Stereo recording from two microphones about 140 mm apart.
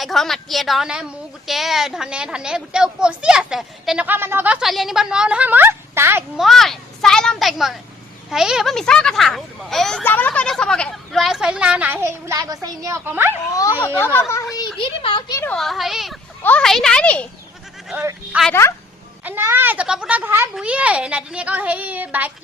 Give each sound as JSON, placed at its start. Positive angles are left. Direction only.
{"t": 0.0, "sound": "a woman's voice", "side_deg": 0}
{"t": 6.3, "sound": "a woman's voice", "side_deg": 0}
{"t": 10.0, "sound": "a woman's voice", "side_deg": 15}
{"t": 13.5, "sound": "a child's voice", "side_deg": 25}
{"t": 14.8, "sound": "speech", "side_deg": 40}
{"t": 15.4, "sound": "a woman's voice", "side_deg": 0}
{"t": 16.4, "sound": "a child's voice", "side_deg": 10}
{"t": 17.9, "sound": "speech", "side_deg": -10}